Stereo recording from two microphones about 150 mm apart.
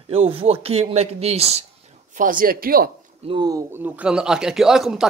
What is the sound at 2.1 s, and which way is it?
Speech, 65° right (ahead or behind).